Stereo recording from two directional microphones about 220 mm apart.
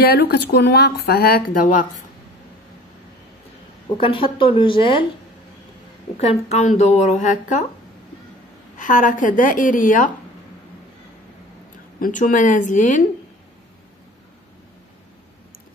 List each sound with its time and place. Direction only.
0.0 s speech: 50° left (ahead or behind)
4.0 s speech: 25° left (ahead or behind)
6.1 s a woman's voice: 30° left (ahead or behind)
8.7 s a woman's voice: 35° left (ahead or behind)
12.0 s a woman's voice: 35° left (ahead or behind)